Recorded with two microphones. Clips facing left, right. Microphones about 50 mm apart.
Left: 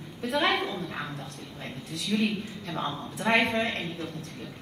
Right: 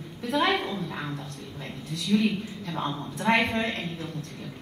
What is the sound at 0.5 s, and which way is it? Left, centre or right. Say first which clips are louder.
Speech: right 1 dB; centre.